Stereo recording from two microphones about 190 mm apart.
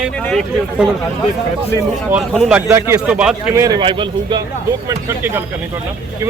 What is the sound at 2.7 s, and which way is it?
Speech, 15° right (ahead or behind).